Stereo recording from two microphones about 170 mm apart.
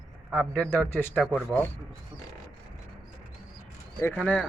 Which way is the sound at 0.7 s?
10° left (ahead or behind).